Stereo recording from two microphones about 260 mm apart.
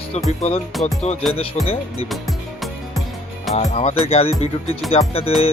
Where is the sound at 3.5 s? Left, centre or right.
Left.